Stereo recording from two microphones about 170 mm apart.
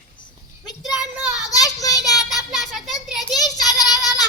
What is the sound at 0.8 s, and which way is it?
Child singing, 5° right (ahead or behind).